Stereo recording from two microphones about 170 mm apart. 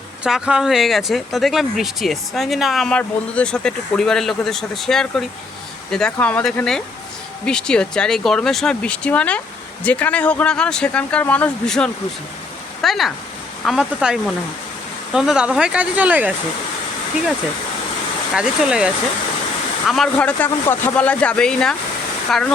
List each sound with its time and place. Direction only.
0.3 s speech: 5° right (ahead or behind)
18.3 s speech: 5° right (ahead or behind)
19.9 s speech: 5° left (ahead or behind)